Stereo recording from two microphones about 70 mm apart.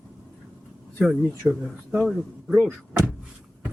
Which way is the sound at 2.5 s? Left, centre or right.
Centre.